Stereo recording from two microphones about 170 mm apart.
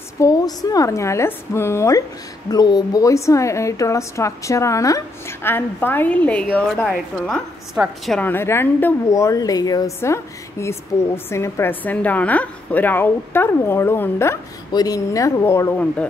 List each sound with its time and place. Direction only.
0.2 s a woman's voice: 20° left (ahead or behind); by 8.3 s centre (ahead or behind)
8.3 s a woman's voice: 15° left (ahead or behind)